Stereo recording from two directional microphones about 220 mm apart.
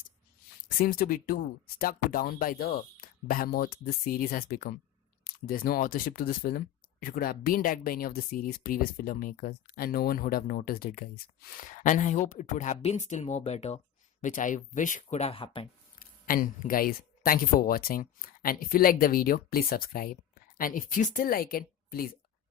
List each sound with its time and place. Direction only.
0.8 s speech: 40° left (ahead or behind); by 15.7 s 25° left (ahead or behind)
16.0 s speech: 40° left (ahead or behind)